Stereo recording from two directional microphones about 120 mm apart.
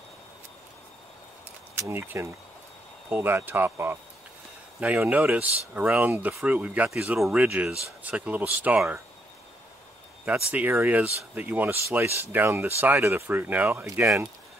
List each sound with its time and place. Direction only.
1.8 s speech: 20° right (ahead or behind)
10.3 s speech: 15° right (ahead or behind)